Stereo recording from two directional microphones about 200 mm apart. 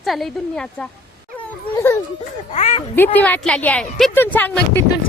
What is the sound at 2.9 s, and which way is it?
A woman's voice, 10° left (ahead or behind).